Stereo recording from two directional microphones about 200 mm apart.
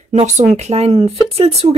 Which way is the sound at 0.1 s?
35° right (ahead or behind).